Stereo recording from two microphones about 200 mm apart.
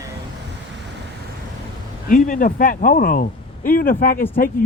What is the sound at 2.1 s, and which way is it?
Speech, 40° left (ahead or behind).